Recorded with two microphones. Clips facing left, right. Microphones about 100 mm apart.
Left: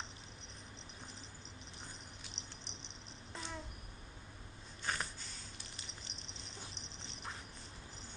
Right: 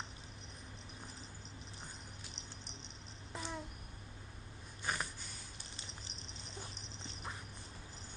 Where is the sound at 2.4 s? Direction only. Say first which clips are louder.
Even; 40° right (ahead or behind).